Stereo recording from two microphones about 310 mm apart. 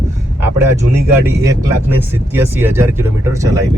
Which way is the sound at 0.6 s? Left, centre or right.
Centre.